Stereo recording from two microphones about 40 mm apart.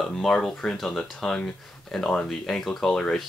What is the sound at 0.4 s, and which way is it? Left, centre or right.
Speech, centre.